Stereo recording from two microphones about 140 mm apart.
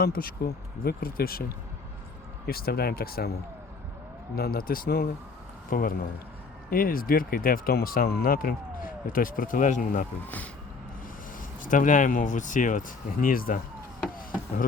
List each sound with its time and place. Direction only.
0.0 s speech: 90° left
4.4 s speech: 90° left; by 10.1 s 70° left (ahead or behind)
10.2 s speech: 10° left (ahead or behind)
11.6 s speech: 70° left (ahead or behind)
13.2 s speech: 90° left